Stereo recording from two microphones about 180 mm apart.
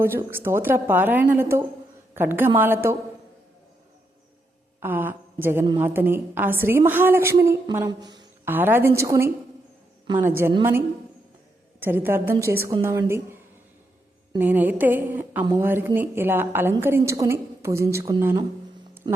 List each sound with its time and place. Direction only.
0.0 s a woman's voice: 15° right (ahead or behind)
4.8 s a woman's voice: 10° right (ahead or behind)
8.4 s a woman's voice: 10° right (ahead or behind)
14.3 s a woman's voice: 10° right (ahead or behind)